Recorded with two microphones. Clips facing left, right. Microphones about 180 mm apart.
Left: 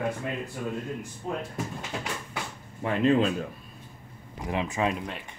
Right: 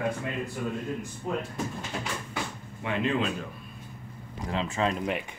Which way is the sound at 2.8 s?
40° left (ahead or behind).